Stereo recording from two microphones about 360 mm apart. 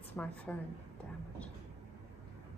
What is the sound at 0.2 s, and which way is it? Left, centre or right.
Speech, centre.